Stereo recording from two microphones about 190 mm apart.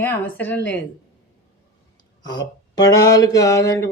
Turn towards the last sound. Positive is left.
turn(degrees=15)  # may be behind; listen again after turning